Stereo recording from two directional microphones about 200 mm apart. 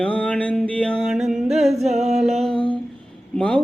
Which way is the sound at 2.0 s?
35° right (ahead or behind).